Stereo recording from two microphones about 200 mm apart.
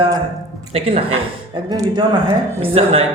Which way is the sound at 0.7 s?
30° right (ahead or behind).